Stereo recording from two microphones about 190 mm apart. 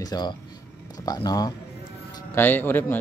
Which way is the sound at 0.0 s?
20° left (ahead or behind).